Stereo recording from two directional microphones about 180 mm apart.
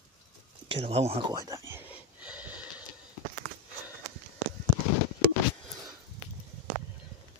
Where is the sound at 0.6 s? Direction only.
35° right (ahead or behind).